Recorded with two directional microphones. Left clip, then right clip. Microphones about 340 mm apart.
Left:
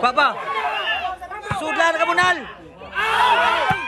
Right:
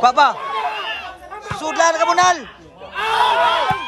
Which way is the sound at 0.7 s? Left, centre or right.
Right.